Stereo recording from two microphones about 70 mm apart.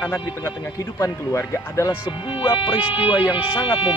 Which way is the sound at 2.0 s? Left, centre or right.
Left.